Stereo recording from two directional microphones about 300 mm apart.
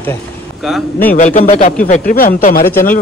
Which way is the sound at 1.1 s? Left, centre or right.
Left.